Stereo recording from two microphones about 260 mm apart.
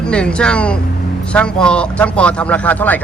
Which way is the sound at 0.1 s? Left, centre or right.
Centre.